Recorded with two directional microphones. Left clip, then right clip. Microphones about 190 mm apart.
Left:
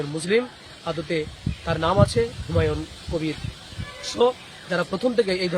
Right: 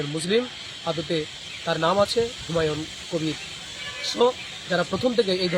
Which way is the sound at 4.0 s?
10° left (ahead or behind).